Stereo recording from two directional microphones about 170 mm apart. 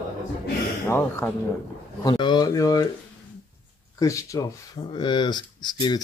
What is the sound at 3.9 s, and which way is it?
Speech, 20° left (ahead or behind).